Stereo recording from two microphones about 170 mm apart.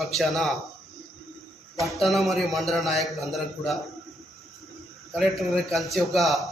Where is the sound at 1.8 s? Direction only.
Centre (ahead or behind).